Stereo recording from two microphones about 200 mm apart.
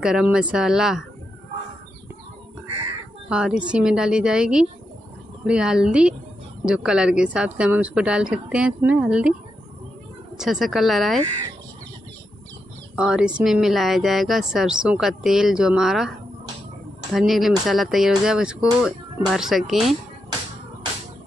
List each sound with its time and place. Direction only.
0.0 s speech: 5° right (ahead or behind)
3.3 s speech: 5° right (ahead or behind)
10.3 s speech: centre (ahead or behind)
12.9 s speech: 5° right (ahead or behind)
17.1 s speech: centre (ahead or behind)